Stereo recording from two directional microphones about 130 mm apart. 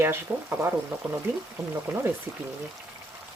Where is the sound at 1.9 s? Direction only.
15° right (ahead or behind).